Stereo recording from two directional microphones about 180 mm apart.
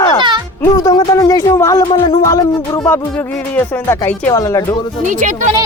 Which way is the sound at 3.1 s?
10° left (ahead or behind).